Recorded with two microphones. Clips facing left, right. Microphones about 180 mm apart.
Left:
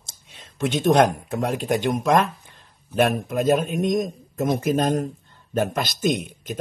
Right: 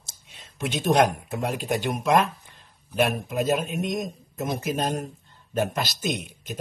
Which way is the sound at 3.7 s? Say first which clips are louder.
Left 6 dB; 50° left (ahead or behind).